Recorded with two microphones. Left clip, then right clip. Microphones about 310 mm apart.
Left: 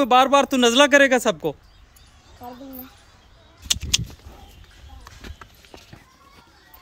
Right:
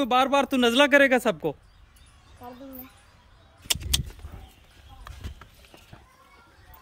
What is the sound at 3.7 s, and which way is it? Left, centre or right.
Gunshot, right.